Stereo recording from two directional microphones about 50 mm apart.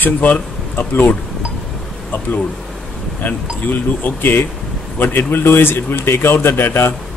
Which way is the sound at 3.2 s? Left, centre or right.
Left.